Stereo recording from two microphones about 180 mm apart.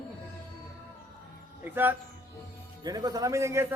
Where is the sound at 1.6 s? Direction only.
10° right (ahead or behind).